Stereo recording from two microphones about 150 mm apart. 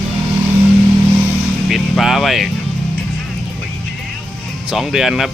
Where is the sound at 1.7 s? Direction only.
Centre (ahead or behind).